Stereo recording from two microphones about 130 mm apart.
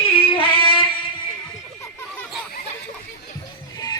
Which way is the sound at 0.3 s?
45° left (ahead or behind).